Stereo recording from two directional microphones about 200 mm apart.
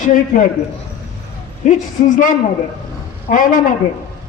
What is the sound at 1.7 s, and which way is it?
A man's voice, 40° left (ahead or behind).